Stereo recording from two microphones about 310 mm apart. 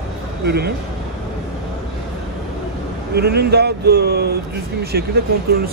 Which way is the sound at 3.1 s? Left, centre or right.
Right.